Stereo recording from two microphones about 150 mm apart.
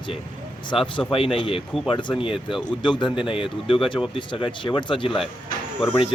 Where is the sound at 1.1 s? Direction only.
35° left (ahead or behind).